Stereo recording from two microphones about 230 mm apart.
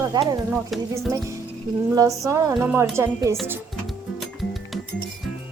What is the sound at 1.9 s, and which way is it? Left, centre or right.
Speech, centre.